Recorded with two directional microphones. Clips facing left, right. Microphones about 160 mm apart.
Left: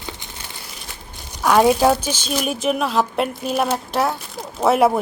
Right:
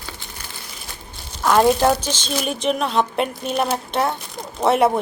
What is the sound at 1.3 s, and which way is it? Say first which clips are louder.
A woman's voice: left 1 dB; 10° left (ahead or behind).